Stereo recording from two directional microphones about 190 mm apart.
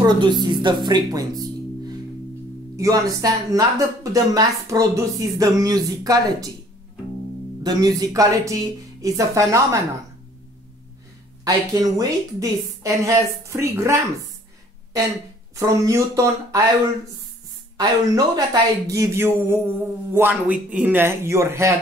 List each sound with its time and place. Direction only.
0.0 s speech: 25° right (ahead or behind)
7.6 s speech: 20° right (ahead or behind)
11.4 s speech: 20° right (ahead or behind)
15.5 s speech: 15° right (ahead or behind)
17.7 s speech: 20° right (ahead or behind)